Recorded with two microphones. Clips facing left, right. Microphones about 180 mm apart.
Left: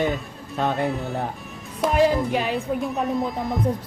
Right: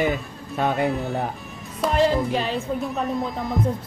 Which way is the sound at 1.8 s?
10° left (ahead or behind).